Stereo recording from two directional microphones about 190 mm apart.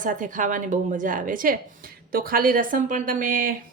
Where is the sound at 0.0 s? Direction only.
45° right (ahead or behind).